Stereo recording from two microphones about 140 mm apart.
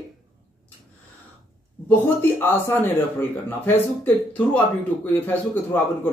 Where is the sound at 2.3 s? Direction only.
15° left (ahead or behind).